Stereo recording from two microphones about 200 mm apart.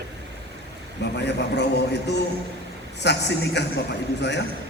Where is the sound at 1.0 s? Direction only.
60° left (ahead or behind).